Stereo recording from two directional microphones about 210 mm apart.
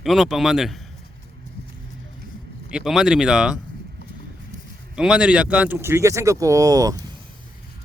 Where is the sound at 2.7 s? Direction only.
Centre (ahead or behind).